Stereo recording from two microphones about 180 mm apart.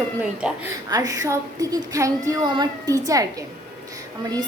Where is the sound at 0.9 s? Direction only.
20° right (ahead or behind).